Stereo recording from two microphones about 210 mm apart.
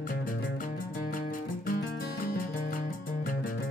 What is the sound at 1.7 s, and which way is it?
Music, 45° left (ahead or behind).